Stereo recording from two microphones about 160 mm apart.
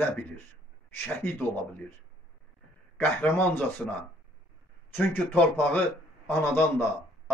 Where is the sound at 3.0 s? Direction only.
10° left (ahead or behind).